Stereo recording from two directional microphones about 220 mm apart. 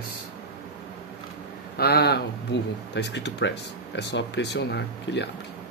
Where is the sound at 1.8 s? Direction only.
45° left (ahead or behind).